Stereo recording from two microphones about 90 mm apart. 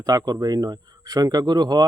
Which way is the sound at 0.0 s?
45° right (ahead or behind).